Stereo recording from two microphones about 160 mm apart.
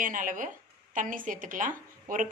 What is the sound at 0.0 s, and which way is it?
Speech, 55° right (ahead or behind).